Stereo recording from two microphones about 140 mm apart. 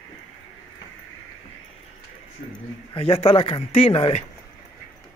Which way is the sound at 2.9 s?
45° left (ahead or behind).